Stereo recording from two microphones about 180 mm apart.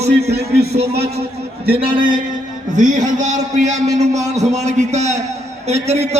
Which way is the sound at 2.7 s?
45° right (ahead or behind).